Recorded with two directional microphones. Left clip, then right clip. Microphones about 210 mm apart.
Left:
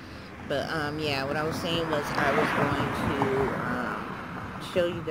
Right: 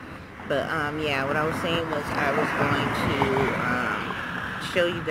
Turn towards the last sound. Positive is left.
turn(degrees=0)  # may be behind; listen again after turning